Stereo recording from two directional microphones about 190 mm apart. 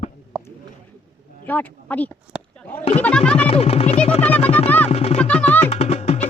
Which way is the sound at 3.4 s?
30° left (ahead or behind).